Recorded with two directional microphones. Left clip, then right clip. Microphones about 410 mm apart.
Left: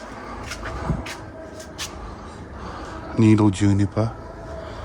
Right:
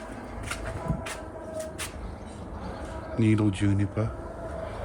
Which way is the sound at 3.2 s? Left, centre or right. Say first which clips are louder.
Left 8 dB; centre.